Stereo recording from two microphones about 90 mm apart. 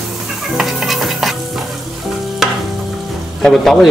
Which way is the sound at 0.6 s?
Centre (ahead or behind).